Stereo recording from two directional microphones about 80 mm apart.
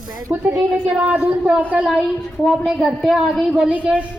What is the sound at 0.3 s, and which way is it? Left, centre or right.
Speech, right.